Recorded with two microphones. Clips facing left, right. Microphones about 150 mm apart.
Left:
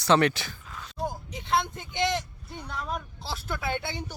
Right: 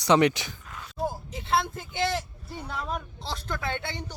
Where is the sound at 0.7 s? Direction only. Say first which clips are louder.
Right 2 dB; 5° right (ahead or behind).